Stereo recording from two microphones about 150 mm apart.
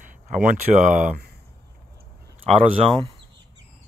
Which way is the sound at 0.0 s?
55° right (ahead or behind).